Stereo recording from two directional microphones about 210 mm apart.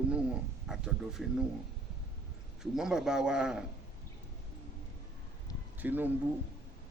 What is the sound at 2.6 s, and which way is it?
A man's voice, 5° right (ahead or behind).